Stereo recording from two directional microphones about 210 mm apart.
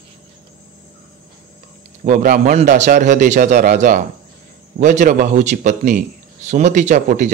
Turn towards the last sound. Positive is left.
turn(degrees=-35)  # may be behind; listen again after turning